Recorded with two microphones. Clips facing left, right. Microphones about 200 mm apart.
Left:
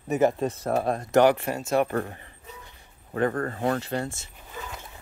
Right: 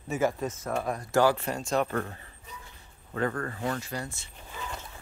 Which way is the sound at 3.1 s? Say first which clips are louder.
Left 5 dB; 35° left (ahead or behind).